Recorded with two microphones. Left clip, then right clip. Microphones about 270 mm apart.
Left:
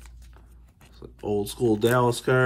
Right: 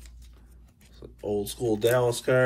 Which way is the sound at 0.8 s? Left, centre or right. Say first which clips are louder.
Left 1 dB; centre.